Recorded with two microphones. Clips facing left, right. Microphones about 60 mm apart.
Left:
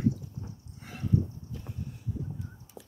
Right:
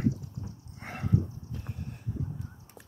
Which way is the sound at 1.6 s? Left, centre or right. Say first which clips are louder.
Even; right.